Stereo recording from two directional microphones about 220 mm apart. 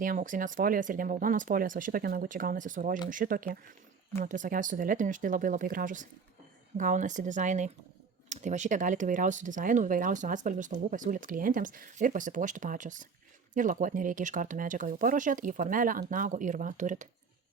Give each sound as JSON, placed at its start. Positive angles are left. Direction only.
{"t": 0.0, "sound": "speech", "side_deg": -35}